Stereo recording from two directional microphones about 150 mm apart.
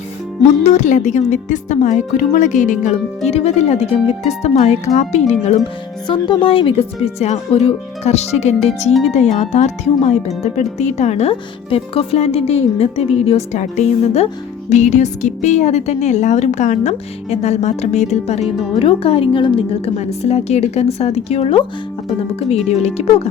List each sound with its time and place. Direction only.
0.4 s a woman's voice: 50° left (ahead or behind)
6.1 s a woman's voice: 35° left (ahead or behind)
23.0 s speech: 45° left (ahead or behind)